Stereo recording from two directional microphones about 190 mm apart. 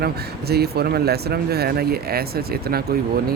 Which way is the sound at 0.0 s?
55° right (ahead or behind).